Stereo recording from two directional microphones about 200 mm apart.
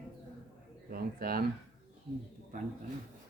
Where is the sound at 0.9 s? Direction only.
45° right (ahead or behind).